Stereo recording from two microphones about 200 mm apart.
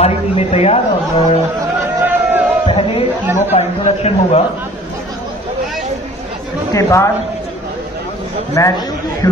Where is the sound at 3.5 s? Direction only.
35° left (ahead or behind).